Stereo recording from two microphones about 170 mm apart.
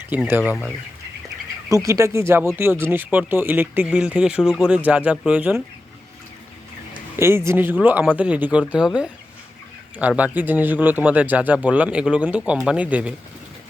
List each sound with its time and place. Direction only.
0.3 s speech: 10° right (ahead or behind)
1.7 s speech: 20° right (ahead or behind)
7.2 s speech: 15° right (ahead or behind)